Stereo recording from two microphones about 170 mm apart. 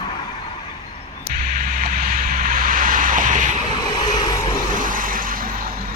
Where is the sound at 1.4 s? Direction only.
55° right (ahead or behind).